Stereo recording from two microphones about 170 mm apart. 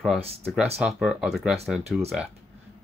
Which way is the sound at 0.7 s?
5° right (ahead or behind).